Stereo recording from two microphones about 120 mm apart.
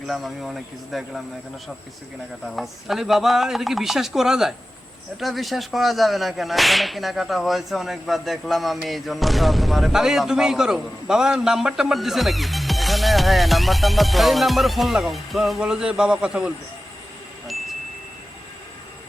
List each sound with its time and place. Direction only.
0.1 s whip: centre (ahead or behind)
2.5 s whip: centre (ahead or behind)